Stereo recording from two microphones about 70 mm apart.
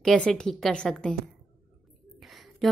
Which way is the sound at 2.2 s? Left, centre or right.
Centre.